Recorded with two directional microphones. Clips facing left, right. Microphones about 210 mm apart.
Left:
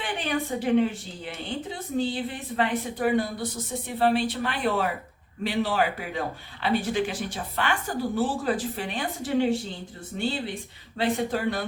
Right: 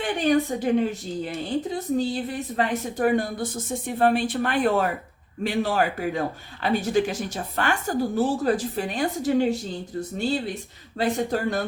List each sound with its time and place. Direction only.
0.0 s a woman's voice: 40° right (ahead or behind)